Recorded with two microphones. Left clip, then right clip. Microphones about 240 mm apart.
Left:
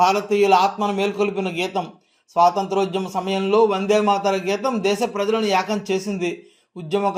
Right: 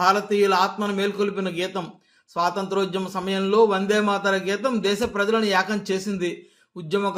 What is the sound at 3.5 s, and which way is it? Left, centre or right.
Speech, right.